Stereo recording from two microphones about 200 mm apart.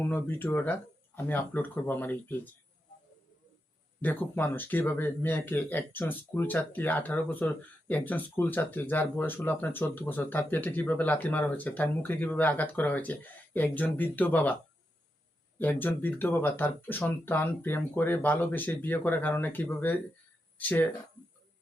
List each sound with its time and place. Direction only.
0.0 s speech: 10° left (ahead or behind)
4.0 s speech: 10° left (ahead or behind)
15.5 s speech: 10° left (ahead or behind)